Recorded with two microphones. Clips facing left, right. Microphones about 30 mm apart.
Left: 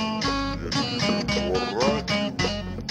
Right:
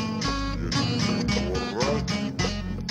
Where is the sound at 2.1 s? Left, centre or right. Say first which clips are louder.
Left 3 dB; left.